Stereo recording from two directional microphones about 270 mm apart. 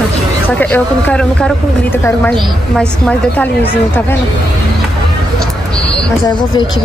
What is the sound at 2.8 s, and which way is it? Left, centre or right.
Speech, centre.